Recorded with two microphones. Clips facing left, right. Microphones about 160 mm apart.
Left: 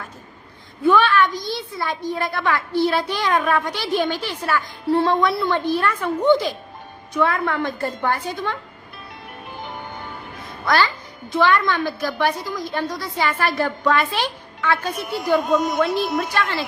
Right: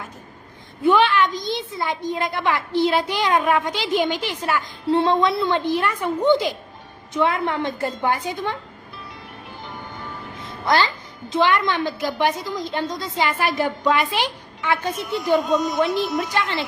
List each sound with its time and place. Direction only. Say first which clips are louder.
0.9 s a woman's voice: even; 20° right (ahead or behind)
9.5 s music: left 3 dB; 55° left (ahead or behind)
10.7 s a woman's voice: even; 20° right (ahead or behind)
15.4 s speech: left 1 dB; 55° left (ahead or behind)